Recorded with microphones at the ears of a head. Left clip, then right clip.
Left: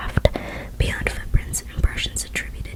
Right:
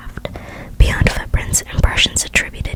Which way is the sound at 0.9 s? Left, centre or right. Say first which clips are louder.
Right 8 dB; right.